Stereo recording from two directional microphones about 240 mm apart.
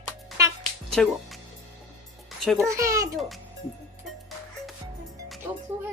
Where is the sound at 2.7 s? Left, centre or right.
Centre.